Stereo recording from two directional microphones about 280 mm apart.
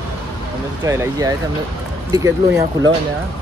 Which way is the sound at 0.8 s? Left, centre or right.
Centre.